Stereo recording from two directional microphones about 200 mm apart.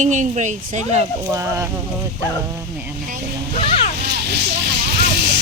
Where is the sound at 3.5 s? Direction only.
30° left (ahead or behind).